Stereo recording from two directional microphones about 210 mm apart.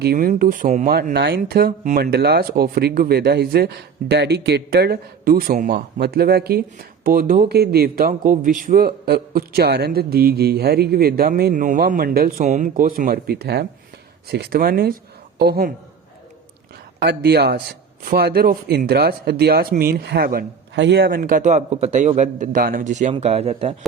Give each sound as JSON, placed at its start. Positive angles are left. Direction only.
{"t": 0.0, "sound": "speech", "side_deg": -45}
{"t": 17.0, "sound": "speech", "side_deg": -50}
{"t": 21.2, "sound": "a man's voice", "side_deg": -40}